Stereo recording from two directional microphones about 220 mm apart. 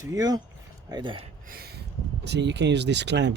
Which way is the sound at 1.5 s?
45° right (ahead or behind).